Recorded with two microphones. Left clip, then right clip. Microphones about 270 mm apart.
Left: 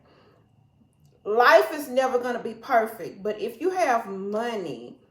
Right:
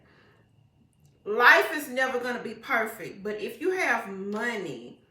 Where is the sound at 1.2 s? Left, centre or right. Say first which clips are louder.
Left 2 dB; centre.